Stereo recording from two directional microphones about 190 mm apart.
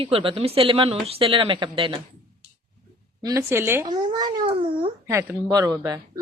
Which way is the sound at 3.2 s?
15° right (ahead or behind).